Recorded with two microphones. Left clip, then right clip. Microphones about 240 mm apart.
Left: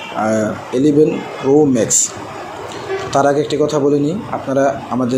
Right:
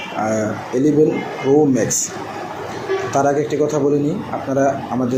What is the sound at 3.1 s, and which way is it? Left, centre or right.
Speech, left.